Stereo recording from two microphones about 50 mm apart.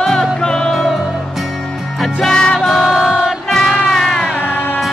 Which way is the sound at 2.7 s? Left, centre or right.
Centre.